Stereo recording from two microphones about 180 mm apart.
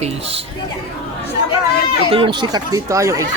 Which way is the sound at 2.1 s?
25° right (ahead or behind).